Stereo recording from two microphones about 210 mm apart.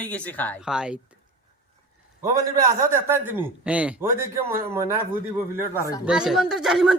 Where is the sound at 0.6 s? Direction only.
5° right (ahead or behind).